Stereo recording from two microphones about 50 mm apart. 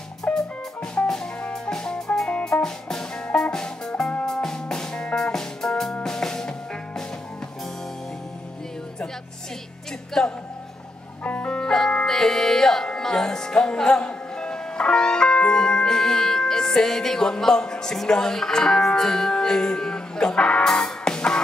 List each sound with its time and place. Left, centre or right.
0.3 s music: left
1.0 s music: centre
10.2 s speech: centre
11.2 s music: left
20.6 s music: centre